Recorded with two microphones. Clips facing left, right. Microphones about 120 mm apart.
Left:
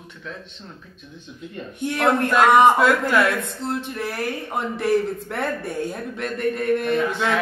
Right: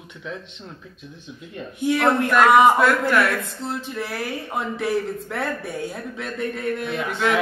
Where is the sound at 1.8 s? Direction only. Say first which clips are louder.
Right 4 dB; centre (ahead or behind).